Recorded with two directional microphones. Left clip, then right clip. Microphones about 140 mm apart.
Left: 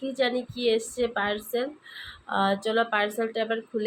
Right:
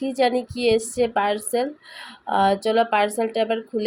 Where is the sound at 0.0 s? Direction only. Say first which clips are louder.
Right 6 dB; 40° right (ahead or behind).